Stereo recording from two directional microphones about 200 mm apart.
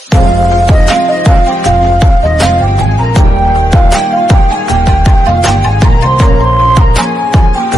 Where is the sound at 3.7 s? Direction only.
Centre (ahead or behind).